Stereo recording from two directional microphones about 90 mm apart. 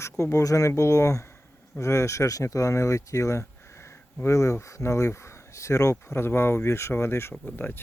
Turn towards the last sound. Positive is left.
turn(degrees=20)  # may be behind; listen again after turning